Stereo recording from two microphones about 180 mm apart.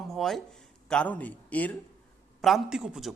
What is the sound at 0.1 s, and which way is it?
A man's voice, centre (ahead or behind).